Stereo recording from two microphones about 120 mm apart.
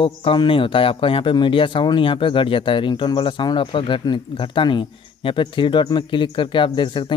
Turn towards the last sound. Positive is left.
turn(degrees=40)  # may be behind; listen again after turning